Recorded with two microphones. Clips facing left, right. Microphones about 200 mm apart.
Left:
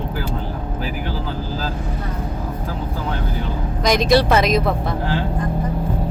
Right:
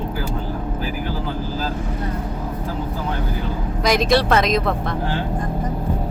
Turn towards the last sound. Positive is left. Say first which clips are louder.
# left 1 dB
turn(degrees=0)  # may be behind; listen again after turning